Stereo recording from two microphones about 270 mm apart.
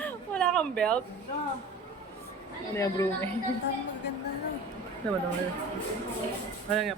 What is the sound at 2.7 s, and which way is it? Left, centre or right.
Speech, centre.